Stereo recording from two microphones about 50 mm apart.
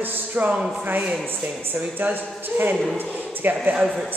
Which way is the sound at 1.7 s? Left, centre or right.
Right.